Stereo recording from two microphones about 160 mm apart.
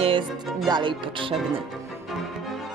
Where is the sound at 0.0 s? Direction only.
30° right (ahead or behind).